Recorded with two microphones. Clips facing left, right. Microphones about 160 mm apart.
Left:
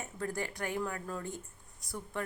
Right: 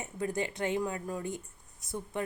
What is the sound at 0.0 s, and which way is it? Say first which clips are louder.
A woman's voice: right 4 dB; 20° right (ahead or behind).